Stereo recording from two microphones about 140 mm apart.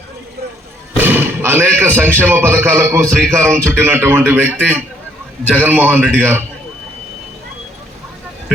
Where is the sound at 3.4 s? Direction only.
15° right (ahead or behind).